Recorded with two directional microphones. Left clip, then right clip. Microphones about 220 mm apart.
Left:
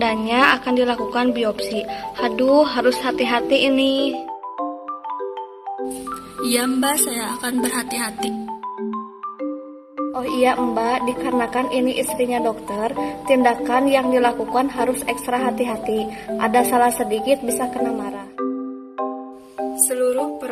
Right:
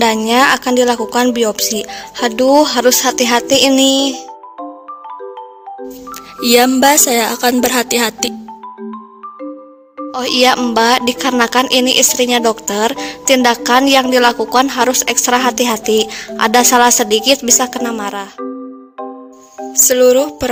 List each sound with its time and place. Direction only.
0.0 s speech: 55° right (ahead or behind)
6.4 s speech: 50° right (ahead or behind)
10.1 s speech: 50° right (ahead or behind)
19.9 s speech: 45° right (ahead or behind)